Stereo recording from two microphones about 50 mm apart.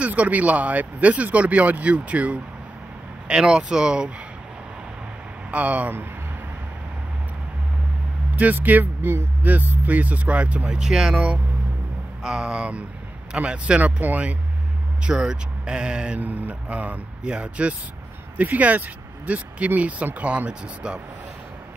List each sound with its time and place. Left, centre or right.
0.0 s speech: right
3.3 s speech: centre
5.5 s speech: right
8.4 s speech: right
10.8 s speech: centre
12.2 s speech: centre; by 14.3 s right
15.0 s speech: centre
16.2 s speech: right
17.2 s speech: right